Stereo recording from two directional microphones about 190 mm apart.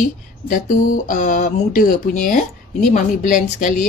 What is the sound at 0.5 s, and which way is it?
Speech, 45° left (ahead or behind).